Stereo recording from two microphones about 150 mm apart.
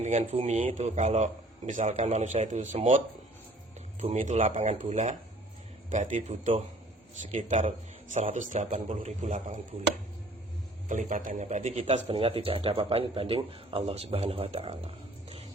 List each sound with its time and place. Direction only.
0.0 s a man's voice: 50° right (ahead or behind)
4.0 s a man's voice: 50° right (ahead or behind)
10.8 s a man's voice: 55° right (ahead or behind); by 15.4 s 40° right (ahead or behind)